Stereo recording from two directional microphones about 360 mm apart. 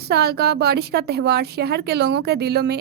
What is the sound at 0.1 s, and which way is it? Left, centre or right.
Speech, right.